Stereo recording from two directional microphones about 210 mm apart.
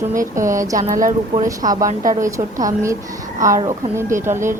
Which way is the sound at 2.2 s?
15° right (ahead or behind).